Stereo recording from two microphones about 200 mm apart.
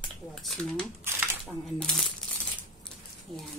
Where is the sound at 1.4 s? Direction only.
Centre (ahead or behind).